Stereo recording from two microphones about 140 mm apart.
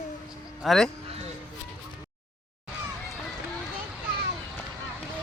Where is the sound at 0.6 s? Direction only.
Centre (ahead or behind).